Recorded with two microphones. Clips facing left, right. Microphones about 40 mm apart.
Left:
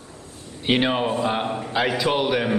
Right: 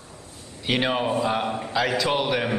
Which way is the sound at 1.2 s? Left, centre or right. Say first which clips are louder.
Left 1 dB; centre.